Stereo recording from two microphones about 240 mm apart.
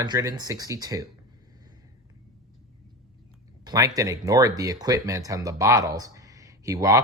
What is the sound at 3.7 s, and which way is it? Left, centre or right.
Speech, centre.